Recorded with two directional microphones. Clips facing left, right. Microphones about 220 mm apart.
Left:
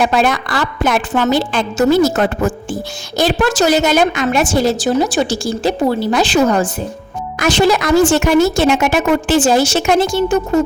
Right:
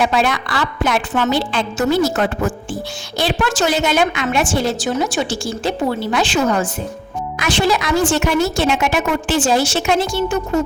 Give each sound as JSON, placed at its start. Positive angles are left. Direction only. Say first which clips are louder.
{"t": 0.0, "sound": "a woman's voice", "louder": "left 3 dB", "side_deg": 45}